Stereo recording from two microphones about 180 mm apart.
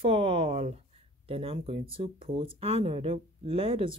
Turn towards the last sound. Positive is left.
turn(degrees=-30)  # may be behind; listen again after turning